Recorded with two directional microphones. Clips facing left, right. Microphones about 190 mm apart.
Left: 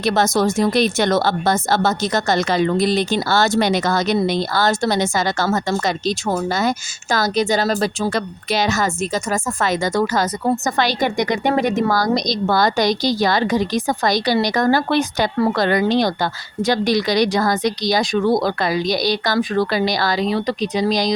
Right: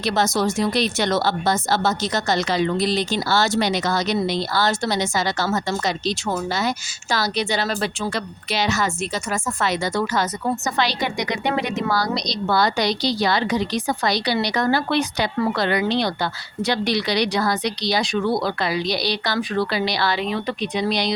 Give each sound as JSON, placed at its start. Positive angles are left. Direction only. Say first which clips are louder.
{"t": 0.0, "sound": "speech", "louder": "left 4 dB", "side_deg": 50}